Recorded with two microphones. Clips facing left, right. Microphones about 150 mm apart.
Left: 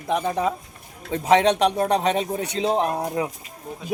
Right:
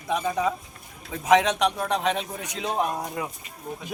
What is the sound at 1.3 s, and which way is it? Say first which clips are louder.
A man's voice: left 3 dB; 35° left (ahead or behind).